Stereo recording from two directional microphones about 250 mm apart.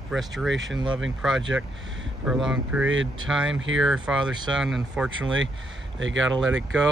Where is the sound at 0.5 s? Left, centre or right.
Right.